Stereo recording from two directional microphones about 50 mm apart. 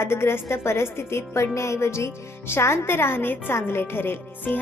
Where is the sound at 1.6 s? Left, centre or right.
Left.